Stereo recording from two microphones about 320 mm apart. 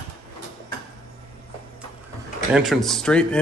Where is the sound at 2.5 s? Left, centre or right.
Centre.